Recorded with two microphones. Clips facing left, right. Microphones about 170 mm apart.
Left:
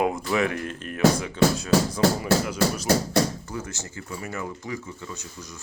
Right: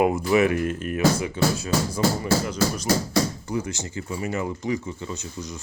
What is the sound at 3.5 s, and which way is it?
Speech, 15° right (ahead or behind).